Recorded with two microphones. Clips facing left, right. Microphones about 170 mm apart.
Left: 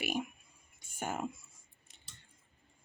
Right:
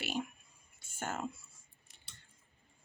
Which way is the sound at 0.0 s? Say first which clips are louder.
Left 2 dB; 15° left (ahead or behind).